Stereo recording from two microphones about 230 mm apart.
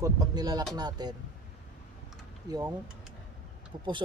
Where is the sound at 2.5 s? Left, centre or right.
Centre.